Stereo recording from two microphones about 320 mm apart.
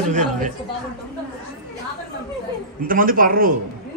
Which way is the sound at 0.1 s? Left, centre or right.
Right.